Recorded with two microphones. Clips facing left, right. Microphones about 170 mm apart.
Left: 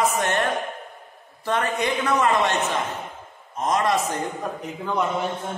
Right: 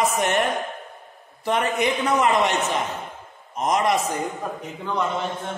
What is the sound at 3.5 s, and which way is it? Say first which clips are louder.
Speech: right 1 dB; 15° right (ahead or behind).